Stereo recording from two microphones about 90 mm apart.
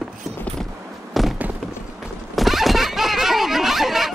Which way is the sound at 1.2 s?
Centre (ahead or behind).